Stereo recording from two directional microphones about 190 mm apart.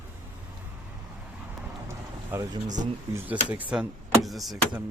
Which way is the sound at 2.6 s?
40° right (ahead or behind).